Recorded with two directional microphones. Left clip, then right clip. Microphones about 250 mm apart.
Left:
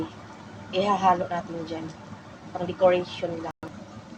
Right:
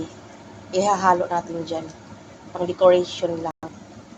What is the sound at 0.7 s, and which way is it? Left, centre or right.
A woman's voice, centre.